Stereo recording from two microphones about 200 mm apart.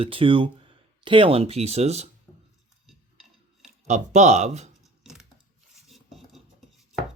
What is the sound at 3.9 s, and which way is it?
Speech, 35° right (ahead or behind).